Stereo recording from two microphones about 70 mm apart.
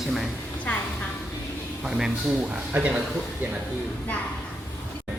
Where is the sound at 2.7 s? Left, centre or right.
Centre.